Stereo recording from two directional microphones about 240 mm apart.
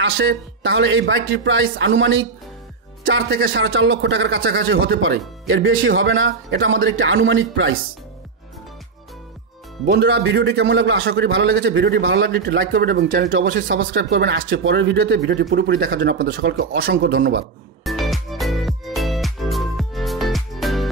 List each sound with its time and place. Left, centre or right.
0.0 s a man's voice: right
9.8 s a man's voice: right
17.8 s music: centre